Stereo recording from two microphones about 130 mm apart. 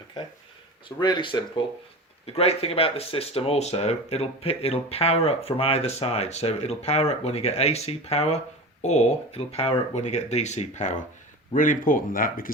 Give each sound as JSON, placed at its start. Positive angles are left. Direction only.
{"t": 0.9, "sound": "speech", "side_deg": 35}
{"t": 2.2, "sound": "speech", "side_deg": 50}
{"t": 11.5, "sound": "speech", "side_deg": 90}